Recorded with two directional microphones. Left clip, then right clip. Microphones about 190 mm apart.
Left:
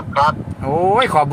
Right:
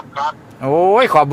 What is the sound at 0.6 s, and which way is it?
Speech, 30° right (ahead or behind).